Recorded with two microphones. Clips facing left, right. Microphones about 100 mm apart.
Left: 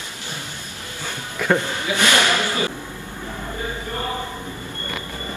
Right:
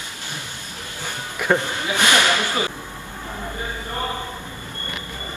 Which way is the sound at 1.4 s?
15° right (ahead or behind).